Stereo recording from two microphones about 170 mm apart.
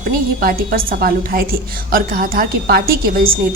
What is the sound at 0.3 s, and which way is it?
A woman's voice, 55° right (ahead or behind).